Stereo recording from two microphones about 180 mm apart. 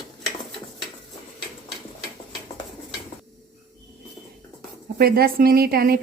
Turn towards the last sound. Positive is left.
turn(degrees=-55)  # may be behind; listen again after turning